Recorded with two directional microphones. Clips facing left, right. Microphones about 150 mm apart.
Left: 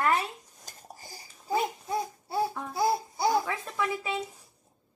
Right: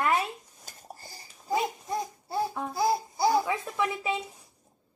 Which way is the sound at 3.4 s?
15° right (ahead or behind).